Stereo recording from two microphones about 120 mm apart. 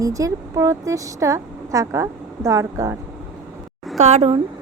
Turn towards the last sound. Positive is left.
turn(degrees=-70)  # may be behind; listen again after turning